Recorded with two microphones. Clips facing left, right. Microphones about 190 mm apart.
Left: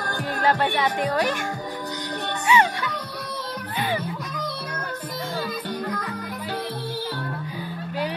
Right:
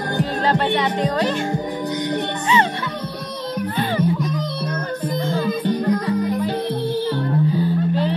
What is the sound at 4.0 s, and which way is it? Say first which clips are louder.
Music: right 10 dB; 20° right (ahead or behind).